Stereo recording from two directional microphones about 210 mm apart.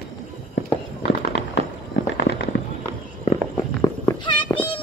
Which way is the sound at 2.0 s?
65° left (ahead or behind).